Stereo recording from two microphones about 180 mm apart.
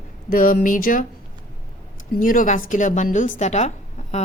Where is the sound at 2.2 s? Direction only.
45° left (ahead or behind).